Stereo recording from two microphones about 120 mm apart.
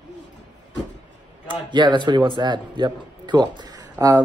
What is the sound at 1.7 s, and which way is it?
Speech, 40° right (ahead or behind).